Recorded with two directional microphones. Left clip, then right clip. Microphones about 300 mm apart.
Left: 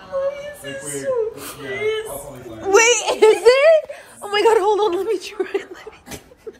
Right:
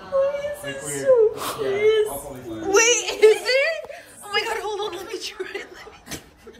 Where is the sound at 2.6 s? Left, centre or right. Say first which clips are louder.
Left 4 dB; centre.